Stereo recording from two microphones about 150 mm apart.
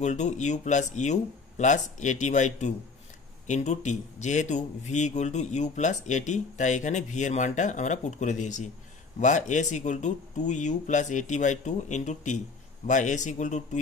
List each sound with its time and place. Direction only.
0.0 s a man's voice: 50° left (ahead or behind)